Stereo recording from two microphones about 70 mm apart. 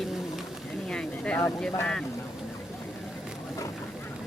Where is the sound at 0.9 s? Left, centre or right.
Centre.